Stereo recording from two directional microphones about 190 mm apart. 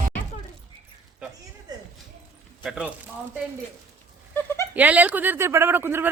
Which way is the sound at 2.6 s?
5° right (ahead or behind).